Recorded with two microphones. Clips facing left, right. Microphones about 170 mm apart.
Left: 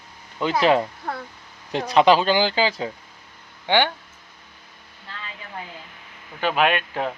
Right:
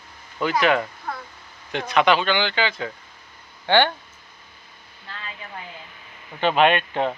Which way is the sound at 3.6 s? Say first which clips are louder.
Right 2 dB; 15° left (ahead or behind).